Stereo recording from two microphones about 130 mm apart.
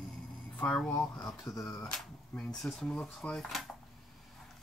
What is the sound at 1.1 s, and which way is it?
Speech, 30° left (ahead or behind).